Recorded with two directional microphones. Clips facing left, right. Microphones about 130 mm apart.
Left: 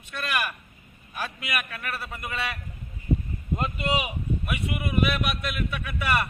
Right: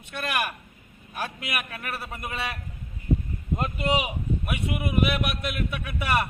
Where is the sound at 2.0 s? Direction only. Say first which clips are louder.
Even; 25° right (ahead or behind).